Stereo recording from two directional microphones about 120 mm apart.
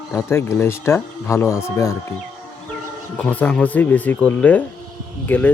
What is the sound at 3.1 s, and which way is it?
Speech, 10° left (ahead or behind).